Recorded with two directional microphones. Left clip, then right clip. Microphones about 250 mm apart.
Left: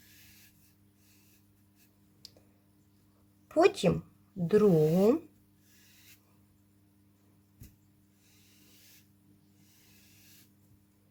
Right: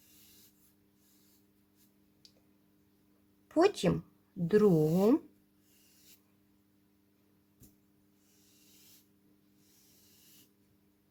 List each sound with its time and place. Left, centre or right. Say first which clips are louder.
3.5 s speech: left 3 dB; centre